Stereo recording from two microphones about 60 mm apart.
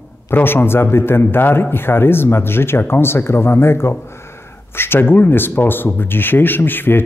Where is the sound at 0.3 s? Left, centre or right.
Left.